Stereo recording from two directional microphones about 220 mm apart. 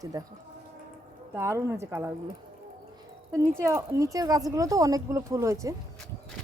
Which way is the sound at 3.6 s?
15° right (ahead or behind).